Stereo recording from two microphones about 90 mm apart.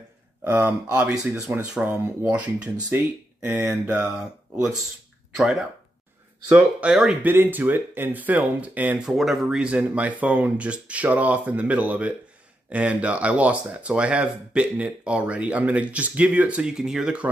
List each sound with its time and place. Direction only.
0.4 s speech: 20° right (ahead or behind)
6.8 s speech: 10° right (ahead or behind)
7.2 s speech: 20° right (ahead or behind)
9.0 s speech: centre (ahead or behind)